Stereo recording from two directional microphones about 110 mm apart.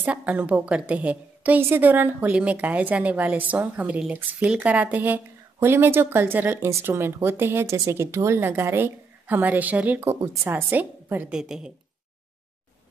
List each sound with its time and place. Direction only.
0.0 s a woman's voice: 15° right (ahead or behind)
11.3 s a woman's voice: 5° right (ahead or behind)